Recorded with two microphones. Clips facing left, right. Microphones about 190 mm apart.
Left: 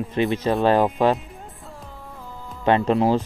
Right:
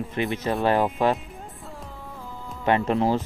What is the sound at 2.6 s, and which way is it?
Speech, 20° left (ahead or behind).